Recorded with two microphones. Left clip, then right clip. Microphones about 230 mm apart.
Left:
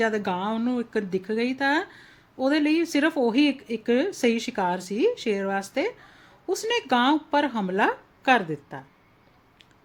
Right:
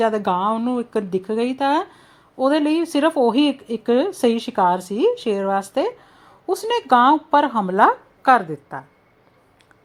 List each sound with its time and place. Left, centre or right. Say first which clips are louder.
0.0 s speech: right 7 dB; centre